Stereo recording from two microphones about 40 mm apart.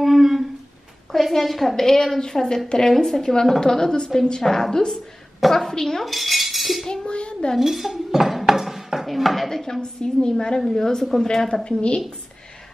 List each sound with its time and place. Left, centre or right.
0.0 s humming: centre
1.1 s a woman's voice: centre
6.1 s cutlery: centre
6.9 s dishes: left
7.5 s speech: centre